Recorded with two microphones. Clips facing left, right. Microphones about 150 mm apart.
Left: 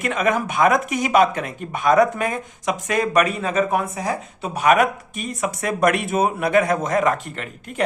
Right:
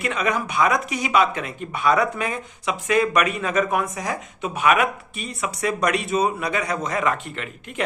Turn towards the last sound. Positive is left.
turn(degrees=40)  # may be behind; listen again after turning